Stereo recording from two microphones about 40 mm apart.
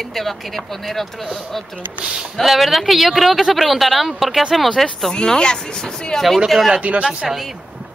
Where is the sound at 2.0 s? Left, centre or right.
Right.